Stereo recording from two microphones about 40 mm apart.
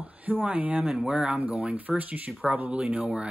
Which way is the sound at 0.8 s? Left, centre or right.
Centre.